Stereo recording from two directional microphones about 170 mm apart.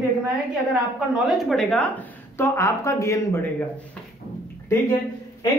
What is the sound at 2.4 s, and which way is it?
A woman's voice, 15° left (ahead or behind).